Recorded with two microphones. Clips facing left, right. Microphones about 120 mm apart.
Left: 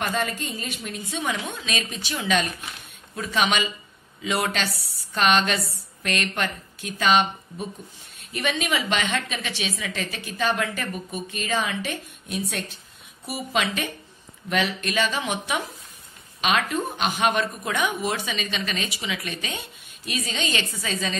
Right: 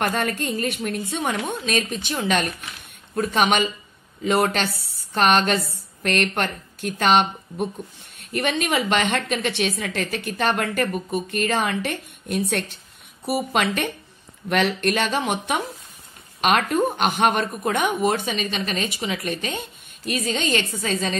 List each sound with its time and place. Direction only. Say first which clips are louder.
0.0 s a woman's voice: right 3 dB; 55° right (ahead or behind)